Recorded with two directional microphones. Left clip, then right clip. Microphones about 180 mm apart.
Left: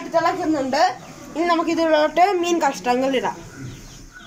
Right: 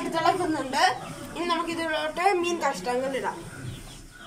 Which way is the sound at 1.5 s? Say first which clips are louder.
Left 9 dB; 50° left (ahead or behind).